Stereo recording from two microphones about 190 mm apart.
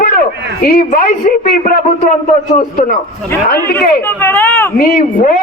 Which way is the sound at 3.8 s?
10° left (ahead or behind).